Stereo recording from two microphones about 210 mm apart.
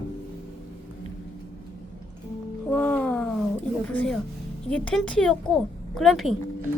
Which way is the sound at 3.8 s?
5° left (ahead or behind).